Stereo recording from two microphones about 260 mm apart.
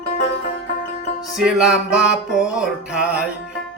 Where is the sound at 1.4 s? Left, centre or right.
Centre.